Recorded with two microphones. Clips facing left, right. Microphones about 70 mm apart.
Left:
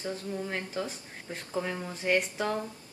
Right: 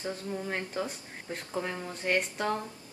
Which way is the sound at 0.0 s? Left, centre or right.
Centre.